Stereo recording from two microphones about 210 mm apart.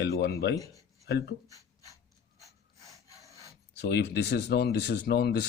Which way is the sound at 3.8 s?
55° left (ahead or behind).